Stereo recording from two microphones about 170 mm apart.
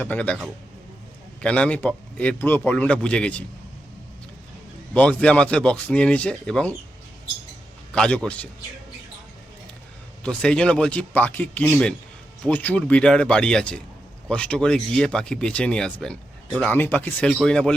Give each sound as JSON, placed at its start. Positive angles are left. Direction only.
{"t": 0.0, "sound": "speech", "side_deg": 10}
{"t": 1.4, "sound": "speech", "side_deg": 5}
{"t": 4.9, "sound": "speech", "side_deg": 10}
{"t": 7.9, "sound": "speech", "side_deg": 5}
{"t": 10.2, "sound": "speech", "side_deg": 5}